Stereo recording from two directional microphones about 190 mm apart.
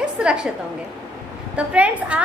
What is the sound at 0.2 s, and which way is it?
Speech, 5° right (ahead or behind).